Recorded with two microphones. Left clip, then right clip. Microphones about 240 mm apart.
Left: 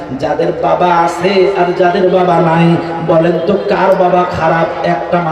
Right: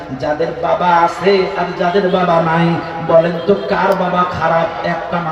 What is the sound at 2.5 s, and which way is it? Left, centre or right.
A man's voice, left.